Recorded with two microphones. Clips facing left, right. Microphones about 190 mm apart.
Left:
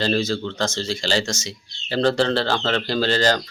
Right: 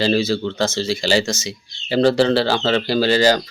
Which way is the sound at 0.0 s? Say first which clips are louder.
Right 4 dB; 5° right (ahead or behind).